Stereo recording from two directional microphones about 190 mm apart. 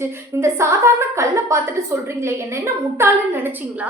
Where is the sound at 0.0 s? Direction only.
15° right (ahead or behind).